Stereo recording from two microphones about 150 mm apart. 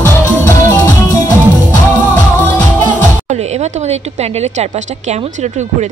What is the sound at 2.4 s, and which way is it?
Music, 10° left (ahead or behind).